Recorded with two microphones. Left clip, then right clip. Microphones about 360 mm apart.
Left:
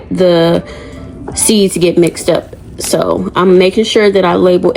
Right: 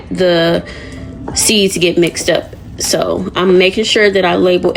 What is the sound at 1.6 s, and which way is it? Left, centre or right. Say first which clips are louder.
Speech: left 2 dB; centre.